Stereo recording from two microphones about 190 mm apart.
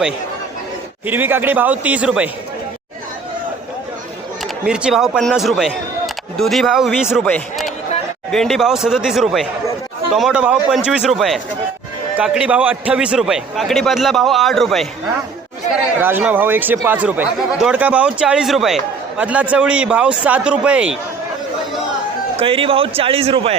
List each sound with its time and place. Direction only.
1.0 s speech: 10° right (ahead or behind)
4.6 s a man's voice: 5° right (ahead or behind)
15.7 s speech: 10° right (ahead or behind)
22.4 s a man's voice: 30° right (ahead or behind)